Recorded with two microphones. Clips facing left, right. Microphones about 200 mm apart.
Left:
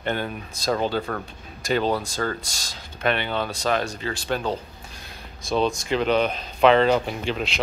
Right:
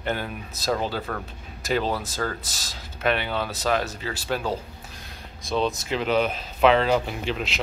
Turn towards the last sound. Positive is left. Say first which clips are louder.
# left 2 dB
turn(degrees=0)  # may be behind; listen again after turning